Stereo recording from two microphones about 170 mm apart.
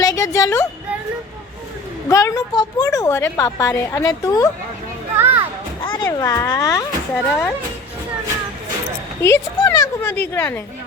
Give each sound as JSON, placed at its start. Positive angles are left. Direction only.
{"t": 0.0, "sound": "a sound", "side_deg": 20}
{"t": 2.0, "sound": "a woman's voice", "side_deg": 20}
{"t": 5.1, "sound": "children playing", "side_deg": -15}
{"t": 5.8, "sound": "a sound", "side_deg": 25}
{"t": 6.1, "sound": "speech", "side_deg": 20}
{"t": 7.1, "sound": "speech", "side_deg": 5}
{"t": 9.2, "sound": "speech", "side_deg": 15}